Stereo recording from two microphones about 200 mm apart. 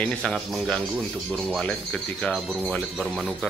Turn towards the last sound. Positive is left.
turn(degrees=0)  # may be behind; listen again after turning